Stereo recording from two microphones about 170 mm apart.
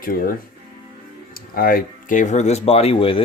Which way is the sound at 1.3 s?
60° left (ahead or behind).